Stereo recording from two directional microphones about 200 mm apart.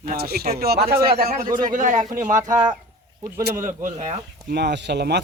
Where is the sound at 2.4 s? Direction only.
20° right (ahead or behind).